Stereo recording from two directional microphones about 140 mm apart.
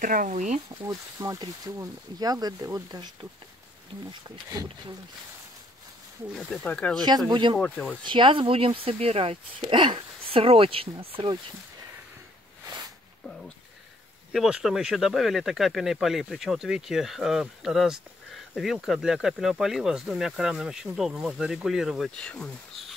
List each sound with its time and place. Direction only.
0.0 s speech: 70° right (ahead or behind)
0.8 s speech: 25° right (ahead or behind)
6.3 s speech: 5° left (ahead or behind)
7.2 s speech: 35° right (ahead or behind)
7.5 s speech: 5° left (ahead or behind)
8.0 s speech: 35° right (ahead or behind)
14.3 s speech: centre (ahead or behind)